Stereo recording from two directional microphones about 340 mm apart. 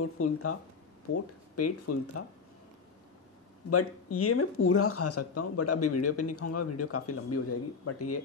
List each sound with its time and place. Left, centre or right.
0.0 s speech: left
3.7 s speech: left